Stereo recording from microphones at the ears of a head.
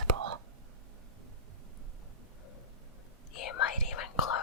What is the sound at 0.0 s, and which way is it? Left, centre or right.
Whispering, right.